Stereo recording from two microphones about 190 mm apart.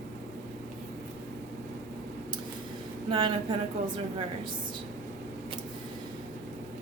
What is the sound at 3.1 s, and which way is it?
Speech, 25° right (ahead or behind).